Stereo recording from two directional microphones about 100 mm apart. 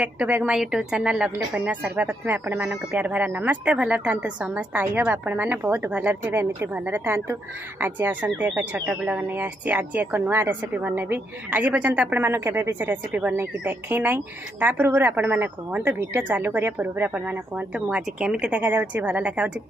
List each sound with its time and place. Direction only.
0.0 s speech: 10° right (ahead or behind)